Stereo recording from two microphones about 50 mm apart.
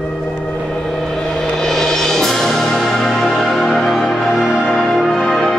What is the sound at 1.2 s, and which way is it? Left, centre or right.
Music, centre.